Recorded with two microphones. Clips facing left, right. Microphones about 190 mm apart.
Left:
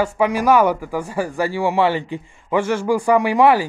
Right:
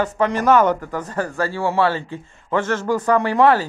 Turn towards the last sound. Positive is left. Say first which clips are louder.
# left 1 dB
turn(degrees=10)  # may be behind; listen again after turning